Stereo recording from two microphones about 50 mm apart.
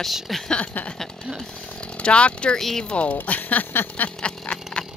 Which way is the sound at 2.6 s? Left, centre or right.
Centre.